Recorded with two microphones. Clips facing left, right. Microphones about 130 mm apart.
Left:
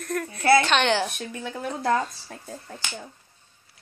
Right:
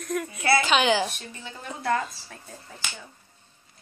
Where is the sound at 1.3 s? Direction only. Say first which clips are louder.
Left 7 dB; 55° left (ahead or behind).